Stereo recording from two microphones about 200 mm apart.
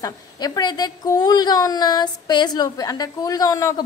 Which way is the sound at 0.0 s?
20° left (ahead or behind).